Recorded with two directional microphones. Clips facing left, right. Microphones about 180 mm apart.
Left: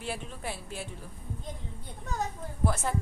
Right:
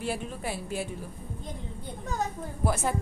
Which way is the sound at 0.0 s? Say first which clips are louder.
Right 4 dB; 5° right (ahead or behind).